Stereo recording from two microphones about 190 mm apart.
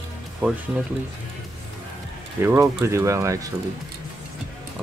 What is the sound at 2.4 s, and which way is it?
Speech, 10° right (ahead or behind).